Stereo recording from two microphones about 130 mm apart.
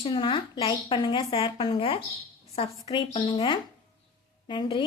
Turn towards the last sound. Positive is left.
turn(degrees=35)  # may be behind; listen again after turning